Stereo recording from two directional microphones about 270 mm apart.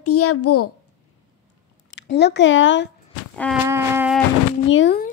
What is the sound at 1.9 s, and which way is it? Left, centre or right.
Speech, left.